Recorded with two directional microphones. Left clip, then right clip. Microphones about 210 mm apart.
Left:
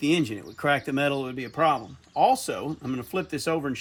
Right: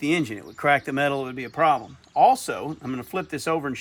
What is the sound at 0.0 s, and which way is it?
Speech, 15° right (ahead or behind).